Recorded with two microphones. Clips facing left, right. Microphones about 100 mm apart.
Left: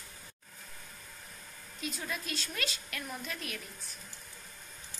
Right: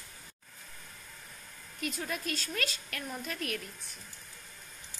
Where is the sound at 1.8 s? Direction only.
50° right (ahead or behind).